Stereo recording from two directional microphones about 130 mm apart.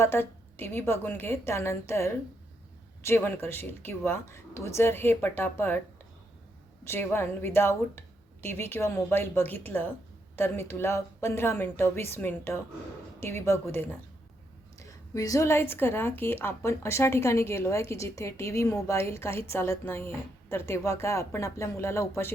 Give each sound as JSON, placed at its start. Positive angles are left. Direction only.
{"t": 0.0, "sound": "a woman's voice", "side_deg": 15}
{"t": 6.8, "sound": "a woman's voice", "side_deg": 20}